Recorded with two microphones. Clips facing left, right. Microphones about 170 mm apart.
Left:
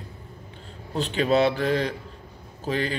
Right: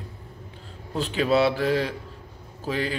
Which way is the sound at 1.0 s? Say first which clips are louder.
Even; 5° right (ahead or behind).